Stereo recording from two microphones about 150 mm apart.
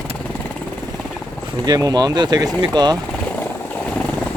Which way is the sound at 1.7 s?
25° right (ahead or behind).